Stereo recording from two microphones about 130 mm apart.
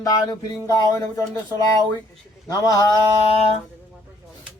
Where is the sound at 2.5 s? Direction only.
30° left (ahead or behind).